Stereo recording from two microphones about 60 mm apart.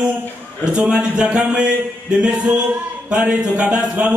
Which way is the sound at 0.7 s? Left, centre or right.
Centre.